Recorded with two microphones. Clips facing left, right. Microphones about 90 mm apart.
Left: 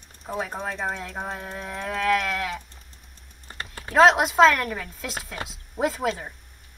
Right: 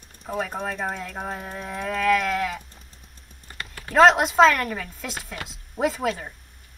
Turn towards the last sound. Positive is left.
turn(degrees=0)  # may be behind; listen again after turning